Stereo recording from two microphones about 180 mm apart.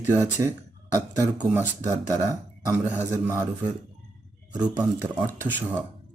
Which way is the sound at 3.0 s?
15° right (ahead or behind).